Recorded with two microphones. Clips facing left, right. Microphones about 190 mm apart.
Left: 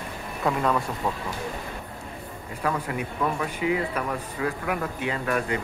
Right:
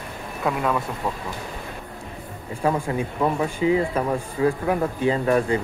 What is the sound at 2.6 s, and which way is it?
Speech, 30° right (ahead or behind).